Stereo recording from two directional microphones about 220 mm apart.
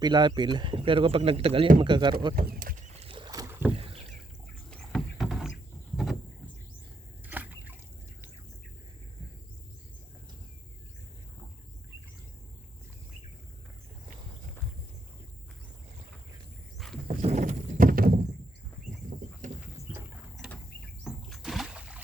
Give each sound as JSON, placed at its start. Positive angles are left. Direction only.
{"t": 0.0, "sound": "speech", "side_deg": -20}
{"t": 2.5, "sound": "rowboat", "side_deg": -40}
{"t": 3.7, "sound": "rowboat", "side_deg": -25}
{"t": 4.7, "sound": "rowboat", "side_deg": 0}
{"t": 7.3, "sound": "a sound", "side_deg": -10}
{"t": 16.7, "sound": "a sound", "side_deg": 0}
{"t": 17.1, "sound": "horse", "side_deg": -30}
{"t": 20.3, "sound": "a sound", "side_deg": 0}
{"t": 21.0, "sound": "rowboat", "side_deg": 0}